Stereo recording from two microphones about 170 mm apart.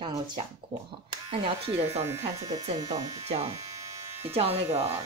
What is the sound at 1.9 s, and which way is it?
A woman's voice, 15° right (ahead or behind).